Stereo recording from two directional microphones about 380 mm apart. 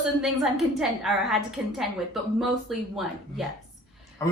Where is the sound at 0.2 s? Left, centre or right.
Centre.